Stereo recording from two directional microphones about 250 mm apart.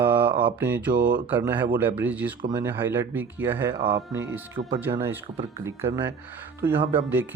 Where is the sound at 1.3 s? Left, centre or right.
Centre.